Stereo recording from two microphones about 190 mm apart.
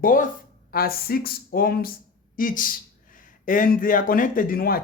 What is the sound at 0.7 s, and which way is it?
Speech, 50° left (ahead or behind).